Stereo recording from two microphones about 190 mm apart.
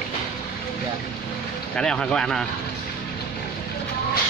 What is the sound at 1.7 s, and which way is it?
Speech, 5° left (ahead or behind).